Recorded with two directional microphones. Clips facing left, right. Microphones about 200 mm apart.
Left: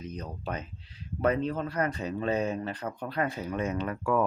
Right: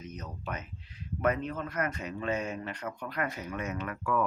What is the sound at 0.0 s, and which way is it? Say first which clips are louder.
Speech: left 4 dB; 30° left (ahead or behind).